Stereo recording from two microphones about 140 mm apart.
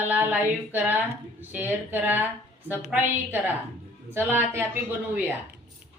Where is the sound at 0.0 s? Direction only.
10° right (ahead or behind).